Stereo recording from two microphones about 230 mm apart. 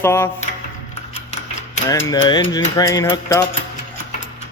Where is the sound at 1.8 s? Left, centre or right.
Centre.